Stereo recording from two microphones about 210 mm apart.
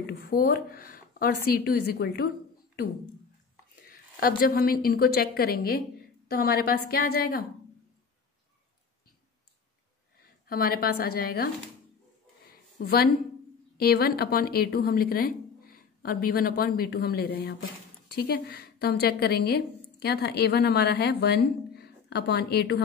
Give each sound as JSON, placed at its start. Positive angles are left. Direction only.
{"t": 0.2, "sound": "a woman's voice", "side_deg": 45}
{"t": 3.8, "sound": "a woman's voice", "side_deg": 40}
{"t": 10.5, "sound": "a woman's voice", "side_deg": 45}
{"t": 12.7, "sound": "a woman's voice", "side_deg": 50}